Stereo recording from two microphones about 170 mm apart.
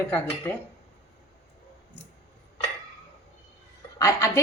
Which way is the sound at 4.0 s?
20° left (ahead or behind).